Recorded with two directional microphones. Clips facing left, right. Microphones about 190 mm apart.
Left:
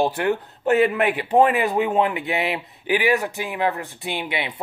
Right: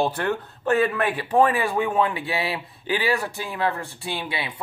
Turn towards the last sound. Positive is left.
turn(degrees=20)  # may be behind; listen again after turning